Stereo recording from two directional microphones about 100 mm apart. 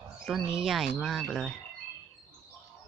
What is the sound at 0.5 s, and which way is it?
Speech, 5° right (ahead or behind).